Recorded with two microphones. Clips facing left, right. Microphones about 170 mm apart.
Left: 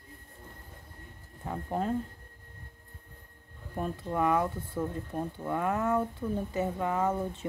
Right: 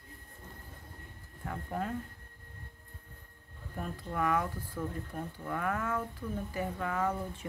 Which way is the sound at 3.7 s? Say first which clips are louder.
Left 5 dB; 30° left (ahead or behind).